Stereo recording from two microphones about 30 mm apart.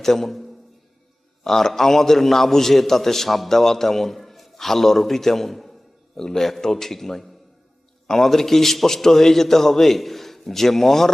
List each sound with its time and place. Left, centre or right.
0.0 s a man's voice: centre
1.5 s a man's voice: centre
3.5 s a man's voice: centre
4.3 s a sound: centre
4.5 s a man's voice: centre
6.1 s a man's voice: centre